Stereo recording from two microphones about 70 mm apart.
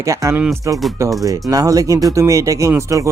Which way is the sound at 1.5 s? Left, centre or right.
Right.